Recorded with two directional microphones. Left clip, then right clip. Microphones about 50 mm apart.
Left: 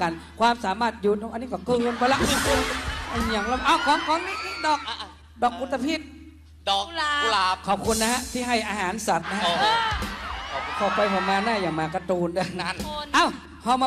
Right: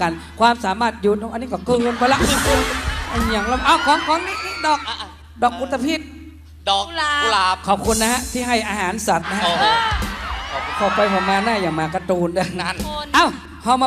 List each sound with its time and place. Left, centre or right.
0.0 s speech: right
1.1 s a man's voice: right
1.4 s speech: right